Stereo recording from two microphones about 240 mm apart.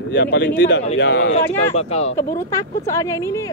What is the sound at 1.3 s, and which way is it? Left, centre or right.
Speech, left.